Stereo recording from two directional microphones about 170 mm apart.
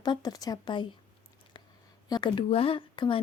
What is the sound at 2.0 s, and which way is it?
Speech, 25° left (ahead or behind).